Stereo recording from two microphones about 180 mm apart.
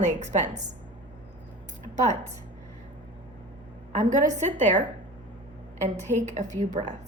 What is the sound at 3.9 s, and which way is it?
Speech, 45° right (ahead or behind).